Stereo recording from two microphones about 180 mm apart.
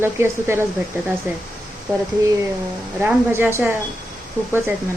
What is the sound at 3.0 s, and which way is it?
Speech, 10° right (ahead or behind).